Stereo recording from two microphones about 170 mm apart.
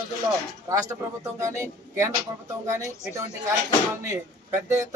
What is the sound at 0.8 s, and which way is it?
A man's voice, 20° right (ahead or behind).